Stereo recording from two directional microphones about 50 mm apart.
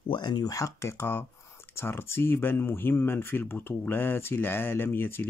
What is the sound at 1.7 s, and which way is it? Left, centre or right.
Speech, left.